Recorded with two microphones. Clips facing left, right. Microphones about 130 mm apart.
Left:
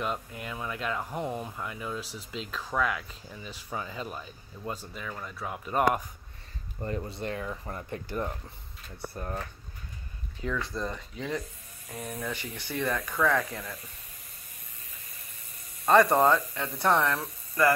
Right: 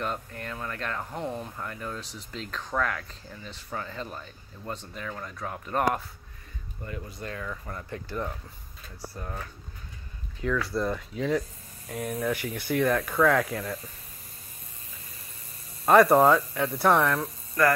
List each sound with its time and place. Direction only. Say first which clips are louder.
0.0 s speech: even; 5° left (ahead or behind)
6.8 s speech: left 5 dB; 40° left (ahead or behind)
7.2 s speech: left 2 dB; 25° left (ahead or behind)
10.7 s speech: right 6 dB; 10° right (ahead or behind)
12.3 s speech: right 7 dB; 10° right (ahead or behind)
15.9 s speech: right 3 dB; 5° right (ahead or behind)